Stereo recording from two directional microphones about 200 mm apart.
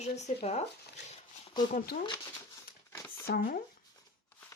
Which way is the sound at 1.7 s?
50° left (ahead or behind).